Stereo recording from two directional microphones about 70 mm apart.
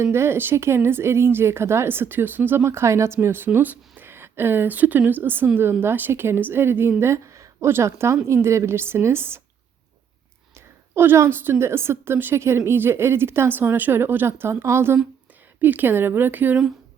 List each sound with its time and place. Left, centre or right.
0.0 s a woman's voice: right
2.6 s a woman's voice: right
10.9 s a woman's voice: right
15.6 s speech: right